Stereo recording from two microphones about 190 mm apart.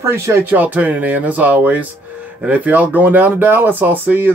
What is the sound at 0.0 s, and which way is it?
Speech, 15° right (ahead or behind).